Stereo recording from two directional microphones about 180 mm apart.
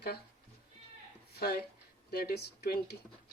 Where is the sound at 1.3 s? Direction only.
60° left (ahead or behind).